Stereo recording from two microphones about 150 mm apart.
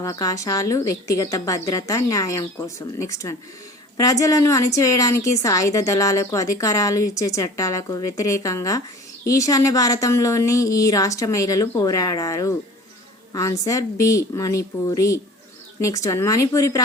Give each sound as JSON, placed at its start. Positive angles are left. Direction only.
{"t": 0.0, "sound": "a woman's voice", "side_deg": 20}